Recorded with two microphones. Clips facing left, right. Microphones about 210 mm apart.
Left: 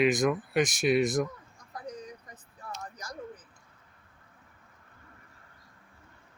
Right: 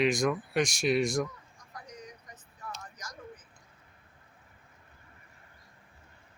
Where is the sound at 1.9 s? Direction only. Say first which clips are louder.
Left 8 dB; 30° left (ahead or behind).